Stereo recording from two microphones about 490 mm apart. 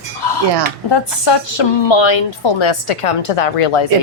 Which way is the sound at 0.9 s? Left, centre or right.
Left.